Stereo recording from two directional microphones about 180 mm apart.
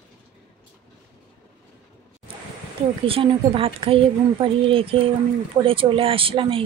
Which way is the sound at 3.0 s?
30° right (ahead or behind).